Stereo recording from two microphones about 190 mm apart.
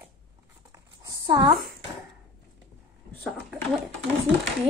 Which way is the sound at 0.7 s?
20° right (ahead or behind).